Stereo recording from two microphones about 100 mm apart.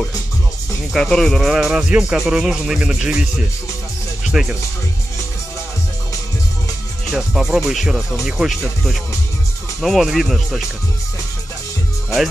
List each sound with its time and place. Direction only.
0.9 s speech: 5° left (ahead or behind)
4.2 s music: 5° right (ahead or behind)
7.2 s speech: 5° right (ahead or behind)